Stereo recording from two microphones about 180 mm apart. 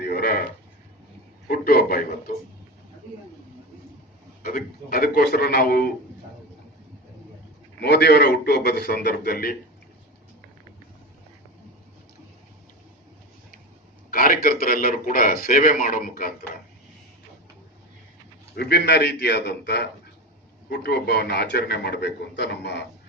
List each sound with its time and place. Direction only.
0.0 s a sound: 60° left (ahead or behind)
1.5 s a man's voice: 55° left (ahead or behind)
4.4 s a man's voice: 55° left (ahead or behind)
7.8 s a man's voice: 65° left (ahead or behind)
14.1 s a man's voice: 50° left (ahead or behind)
18.5 s a man's voice: 65° left (ahead or behind)